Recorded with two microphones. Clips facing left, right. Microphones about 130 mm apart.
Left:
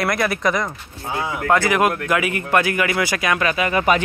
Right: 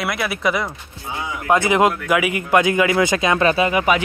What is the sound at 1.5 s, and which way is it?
Speech, 20° right (ahead or behind).